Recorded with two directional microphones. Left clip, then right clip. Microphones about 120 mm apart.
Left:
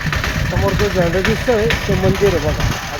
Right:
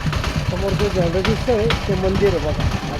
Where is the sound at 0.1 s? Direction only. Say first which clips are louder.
Left 4 dB; 35° left (ahead or behind); by 2.6 s 55° left (ahead or behind).